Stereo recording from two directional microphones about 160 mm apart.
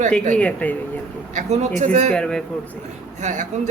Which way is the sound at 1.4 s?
50° right (ahead or behind).